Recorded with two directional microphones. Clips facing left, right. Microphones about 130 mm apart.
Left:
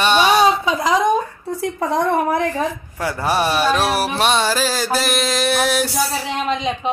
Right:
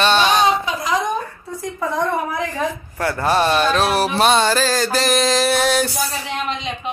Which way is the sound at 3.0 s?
10° left (ahead or behind).